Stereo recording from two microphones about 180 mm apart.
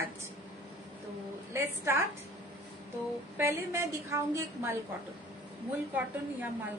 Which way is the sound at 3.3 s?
15° right (ahead or behind).